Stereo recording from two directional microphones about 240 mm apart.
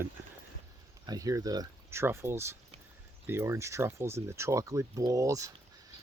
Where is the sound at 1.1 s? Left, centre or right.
Centre.